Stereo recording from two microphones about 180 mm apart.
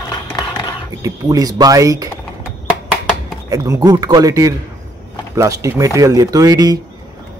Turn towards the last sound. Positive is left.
turn(degrees=-20)  # may be behind; listen again after turning